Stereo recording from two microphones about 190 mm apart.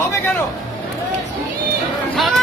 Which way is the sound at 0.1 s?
10° left (ahead or behind).